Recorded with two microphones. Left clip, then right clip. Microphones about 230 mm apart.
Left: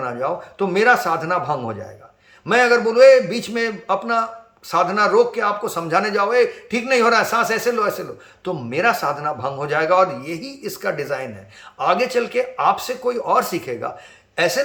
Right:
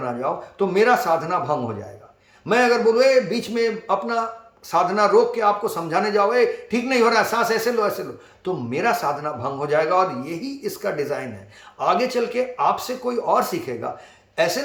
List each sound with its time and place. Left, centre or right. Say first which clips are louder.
0.0 s a man's voice: left 2 dB; centre